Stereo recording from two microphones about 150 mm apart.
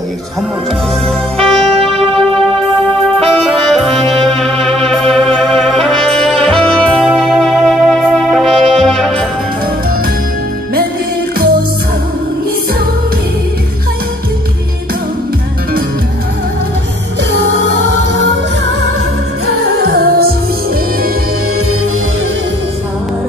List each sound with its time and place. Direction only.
1.0 s music: 5° left (ahead or behind)
19.8 s music: 90° right